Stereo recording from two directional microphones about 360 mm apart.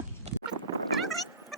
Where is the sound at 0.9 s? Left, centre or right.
Centre.